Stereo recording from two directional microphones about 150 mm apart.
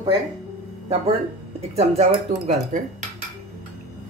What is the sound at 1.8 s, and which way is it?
Speech, 45° right (ahead or behind).